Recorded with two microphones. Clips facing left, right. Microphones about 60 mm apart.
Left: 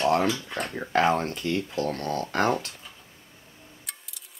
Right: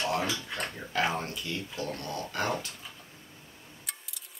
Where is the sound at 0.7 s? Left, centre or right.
Left.